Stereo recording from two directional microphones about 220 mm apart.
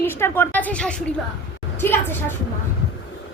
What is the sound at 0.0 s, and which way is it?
A woman's voice, 10° left (ahead or behind).